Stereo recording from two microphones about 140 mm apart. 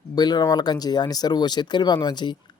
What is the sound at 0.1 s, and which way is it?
Speech, 30° left (ahead or behind).